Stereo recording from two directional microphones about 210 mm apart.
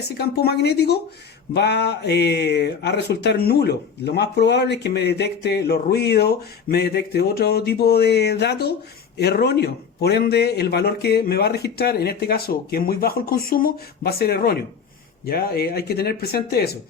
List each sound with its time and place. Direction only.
0.0 s speech: 50° left (ahead or behind)